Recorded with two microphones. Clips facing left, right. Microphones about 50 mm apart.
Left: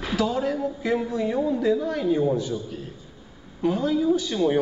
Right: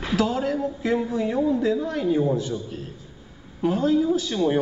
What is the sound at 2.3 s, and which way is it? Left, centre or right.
A woman's voice, right.